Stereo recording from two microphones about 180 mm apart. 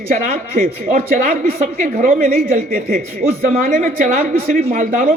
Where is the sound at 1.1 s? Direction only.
50° right (ahead or behind).